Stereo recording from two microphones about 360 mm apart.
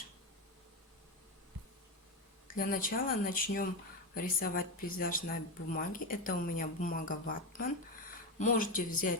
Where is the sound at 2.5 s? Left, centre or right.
Left.